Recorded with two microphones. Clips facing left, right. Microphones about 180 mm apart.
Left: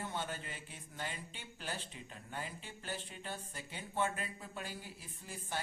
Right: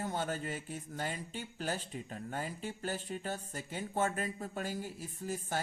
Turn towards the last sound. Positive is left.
turn(degrees=-45)  # may be behind; listen again after turning